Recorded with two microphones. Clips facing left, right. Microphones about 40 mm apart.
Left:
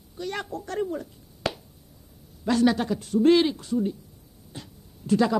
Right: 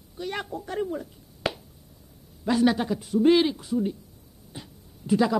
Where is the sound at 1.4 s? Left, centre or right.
Centre.